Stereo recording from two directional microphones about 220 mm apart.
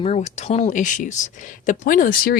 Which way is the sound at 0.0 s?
30° left (ahead or behind).